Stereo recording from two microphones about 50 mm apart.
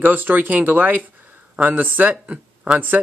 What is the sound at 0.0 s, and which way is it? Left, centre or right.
Speech, right.